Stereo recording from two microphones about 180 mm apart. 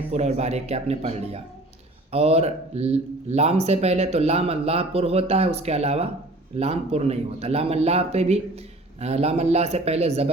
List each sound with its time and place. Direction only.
0.1 s speech: 40° right (ahead or behind)